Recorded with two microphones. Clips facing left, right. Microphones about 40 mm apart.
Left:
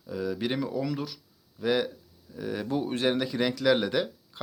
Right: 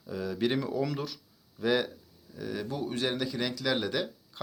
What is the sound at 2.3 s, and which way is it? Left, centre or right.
Speech, centre.